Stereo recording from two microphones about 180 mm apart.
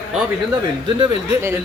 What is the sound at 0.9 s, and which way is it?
Speech, 15° right (ahead or behind).